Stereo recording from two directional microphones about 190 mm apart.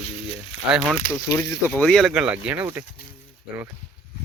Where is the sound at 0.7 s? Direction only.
5° right (ahead or behind).